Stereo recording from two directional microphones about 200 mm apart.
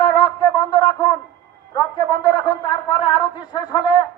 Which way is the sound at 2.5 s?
25° left (ahead or behind).